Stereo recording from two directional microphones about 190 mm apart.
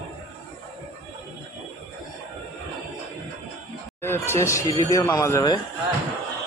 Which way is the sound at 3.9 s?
10° left (ahead or behind).